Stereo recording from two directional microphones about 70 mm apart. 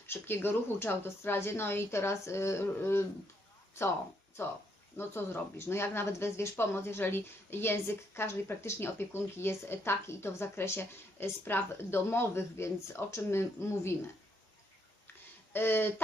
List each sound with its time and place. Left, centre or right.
0.1 s speech: left
4.4 s speech: left
15.5 s speech: left